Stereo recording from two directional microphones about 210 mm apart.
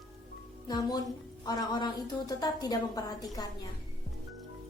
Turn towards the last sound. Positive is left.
turn(degrees=20)  # may be behind; listen again after turning